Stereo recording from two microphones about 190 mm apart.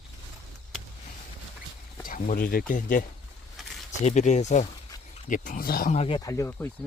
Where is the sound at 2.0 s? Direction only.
50° left (ahead or behind).